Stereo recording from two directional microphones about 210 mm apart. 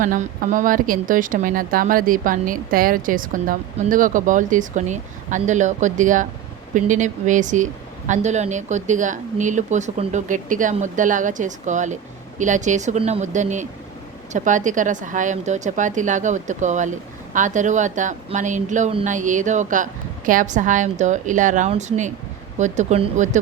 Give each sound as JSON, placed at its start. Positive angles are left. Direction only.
{"t": 0.0, "sound": "a woman's voice", "side_deg": -40}